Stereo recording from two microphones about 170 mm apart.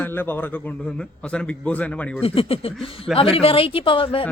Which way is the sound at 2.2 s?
35° left (ahead or behind).